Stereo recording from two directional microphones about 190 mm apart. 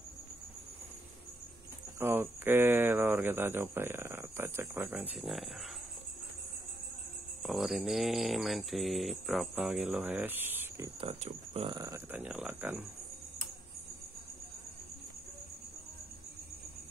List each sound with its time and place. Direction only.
2.0 s speech: 10° right (ahead or behind)
7.4 s speech: centre (ahead or behind)
11.0 s speech: 30° right (ahead or behind)
11.7 s speech: 15° right (ahead or behind)